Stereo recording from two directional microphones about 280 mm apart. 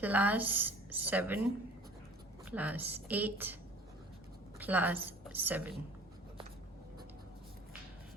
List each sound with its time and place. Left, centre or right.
0.0 s a woman's voice: centre
2.4 s a woman's voice: centre
4.6 s a woman's voice: centre